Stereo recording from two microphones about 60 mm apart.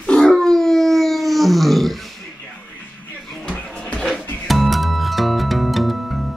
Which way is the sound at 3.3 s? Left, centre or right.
Centre.